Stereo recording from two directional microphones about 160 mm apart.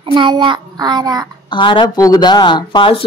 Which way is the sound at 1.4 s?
30° left (ahead or behind).